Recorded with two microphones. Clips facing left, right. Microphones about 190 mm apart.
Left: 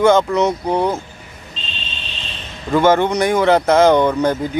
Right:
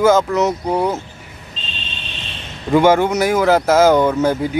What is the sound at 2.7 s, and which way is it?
Speech, 10° right (ahead or behind).